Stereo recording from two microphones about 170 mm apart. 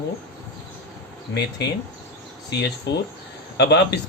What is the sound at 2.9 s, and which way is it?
Speech, 90° left.